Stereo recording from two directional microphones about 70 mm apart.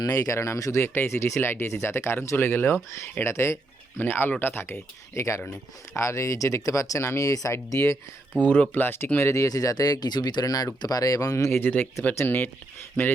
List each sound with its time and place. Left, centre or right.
0.0 s speech: left
5.1 s speech: left
8.4 s speech: left
8.7 s speech: left
9.1 s speech: left
12.1 s speech: left